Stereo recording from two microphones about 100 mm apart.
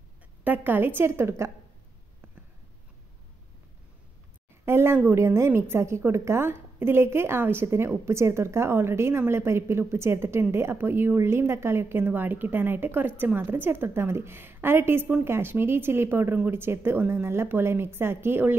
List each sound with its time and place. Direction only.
0.4 s speech: 20° right (ahead or behind)
4.6 s speech: 25° right (ahead or behind)